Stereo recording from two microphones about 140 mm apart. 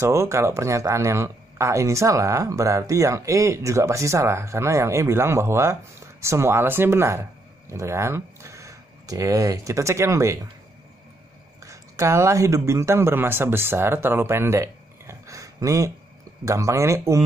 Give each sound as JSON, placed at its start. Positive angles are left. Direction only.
{"t": 0.0, "sound": "speech", "side_deg": -20}
{"t": 11.6, "sound": "speech", "side_deg": -20}